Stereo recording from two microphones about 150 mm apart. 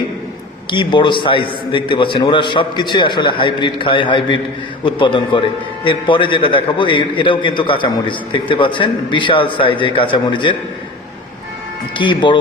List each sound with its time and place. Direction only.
0.7 s a man's voice: 30° left (ahead or behind)
11.9 s a man's voice: 30° left (ahead or behind)